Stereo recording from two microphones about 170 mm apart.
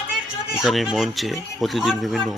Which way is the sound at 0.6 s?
Centre (ahead or behind).